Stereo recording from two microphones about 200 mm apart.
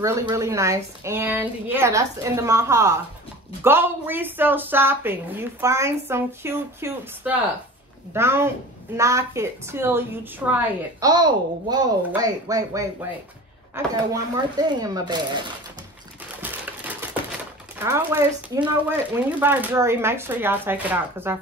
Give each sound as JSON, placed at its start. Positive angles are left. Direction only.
{"t": 0.0, "sound": "a woman's voice", "side_deg": -15}
{"t": 11.1, "sound": "a woman's voice", "side_deg": -20}
{"t": 16.4, "sound": "typewriter", "side_deg": -10}
{"t": 17.7, "sound": "a woman's voice", "side_deg": -10}